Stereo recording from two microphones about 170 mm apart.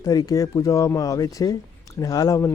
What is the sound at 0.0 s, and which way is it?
Speech, 20° left (ahead or behind).